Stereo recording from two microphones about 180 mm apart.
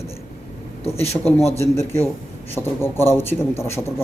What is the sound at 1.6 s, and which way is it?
A man's voice, 15° left (ahead or behind).